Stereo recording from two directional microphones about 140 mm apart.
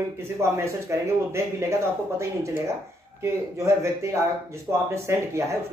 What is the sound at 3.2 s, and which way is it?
Speech, 20° right (ahead or behind).